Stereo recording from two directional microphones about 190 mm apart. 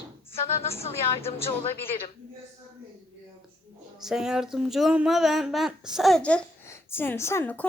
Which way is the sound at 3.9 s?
Centre (ahead or behind).